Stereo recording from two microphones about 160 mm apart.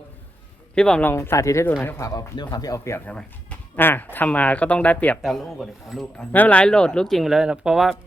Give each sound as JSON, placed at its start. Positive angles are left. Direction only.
{"t": 0.8, "sound": "speech", "side_deg": 5}
{"t": 1.1, "sound": "speech", "side_deg": 15}